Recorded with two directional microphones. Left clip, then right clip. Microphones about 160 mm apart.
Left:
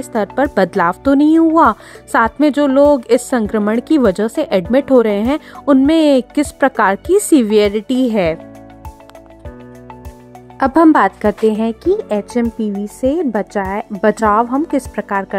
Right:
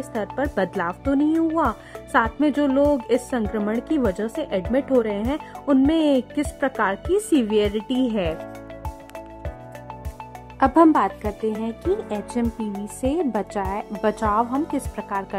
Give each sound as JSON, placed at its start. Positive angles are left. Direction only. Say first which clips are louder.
{"t": 0.1, "sound": "speech", "louder": "left 10 dB", "side_deg": 40}
{"t": 10.6, "sound": "a woman's voice", "louder": "left 6 dB", "side_deg": 45}
{"t": 13.0, "sound": "speech", "louder": "left 7 dB", "side_deg": 25}